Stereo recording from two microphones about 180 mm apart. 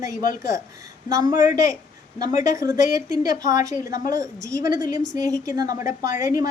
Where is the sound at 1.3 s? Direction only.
45° left (ahead or behind).